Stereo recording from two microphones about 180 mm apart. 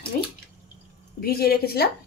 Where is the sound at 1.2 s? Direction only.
60° left (ahead or behind).